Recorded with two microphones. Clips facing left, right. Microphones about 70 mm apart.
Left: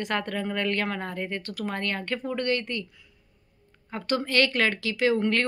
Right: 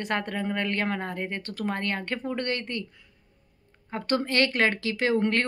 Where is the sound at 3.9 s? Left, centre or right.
Right.